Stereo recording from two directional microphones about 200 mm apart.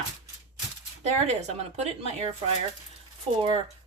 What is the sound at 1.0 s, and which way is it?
Speech, 35° right (ahead or behind).